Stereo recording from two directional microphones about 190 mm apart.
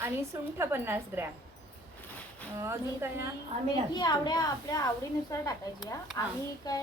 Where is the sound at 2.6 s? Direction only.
15° right (ahead or behind).